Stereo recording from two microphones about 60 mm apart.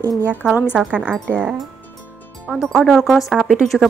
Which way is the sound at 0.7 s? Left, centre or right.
Right.